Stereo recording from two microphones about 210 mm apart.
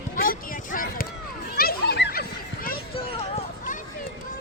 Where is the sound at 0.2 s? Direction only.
45° left (ahead or behind).